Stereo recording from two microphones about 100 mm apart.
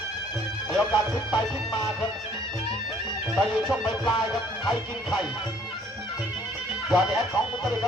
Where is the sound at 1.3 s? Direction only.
45° left (ahead or behind).